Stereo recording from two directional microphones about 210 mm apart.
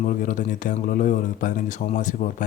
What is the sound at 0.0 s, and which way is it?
Speech, 40° left (ahead or behind).